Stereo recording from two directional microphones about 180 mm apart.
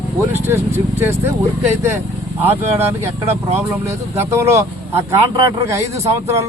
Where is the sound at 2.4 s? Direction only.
10° right (ahead or behind).